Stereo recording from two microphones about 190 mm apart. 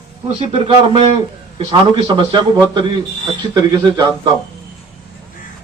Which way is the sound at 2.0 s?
25° right (ahead or behind).